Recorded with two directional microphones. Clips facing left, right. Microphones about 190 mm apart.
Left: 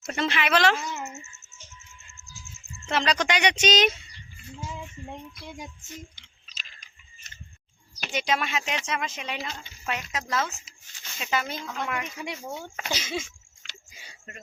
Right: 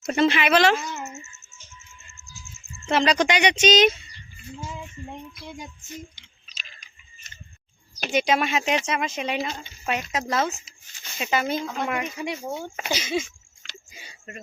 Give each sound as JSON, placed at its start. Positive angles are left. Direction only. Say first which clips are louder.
{"t": 0.1, "sound": "speech", "louder": "right 6 dB", "side_deg": -10}
{"t": 2.9, "sound": "speech", "louder": "right 5 dB", "side_deg": -15}
{"t": 3.5, "sound": "speech", "louder": "right 5 dB", "side_deg": 10}
{"t": 8.1, "sound": "speech", "louder": "right 5 dB", "side_deg": -15}
{"t": 12.9, "sound": "speech", "louder": "right 5 dB", "side_deg": 0}